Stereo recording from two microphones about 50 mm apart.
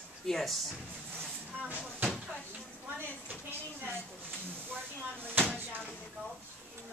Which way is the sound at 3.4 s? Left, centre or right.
Right.